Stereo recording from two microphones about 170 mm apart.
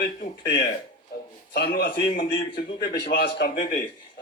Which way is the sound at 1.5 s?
80° left.